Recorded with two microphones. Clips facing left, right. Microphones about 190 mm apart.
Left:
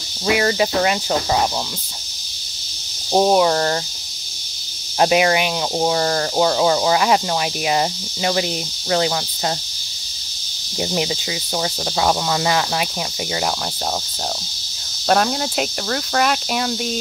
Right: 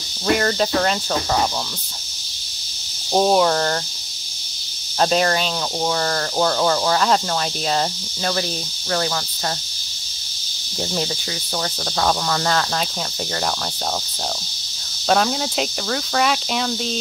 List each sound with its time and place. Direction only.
0.3 s speech: 5° left (ahead or behind)
3.1 s speech: 10° left (ahead or behind)
4.9 s speech: 10° left (ahead or behind)
10.8 s speech: 15° left (ahead or behind)
15.0 s speech: 5° left (ahead or behind)